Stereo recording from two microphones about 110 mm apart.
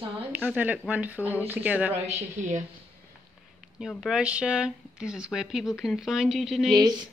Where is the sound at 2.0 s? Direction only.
85° right.